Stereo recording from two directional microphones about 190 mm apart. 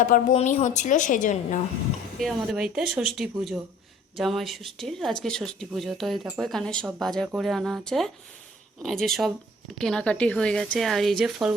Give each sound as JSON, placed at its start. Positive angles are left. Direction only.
{"t": 0.0, "sound": "a woman's voice", "side_deg": 40}
{"t": 2.1, "sound": "speech", "side_deg": 0}